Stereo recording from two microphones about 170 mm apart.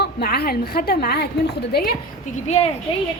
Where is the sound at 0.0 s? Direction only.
70° left (ahead or behind).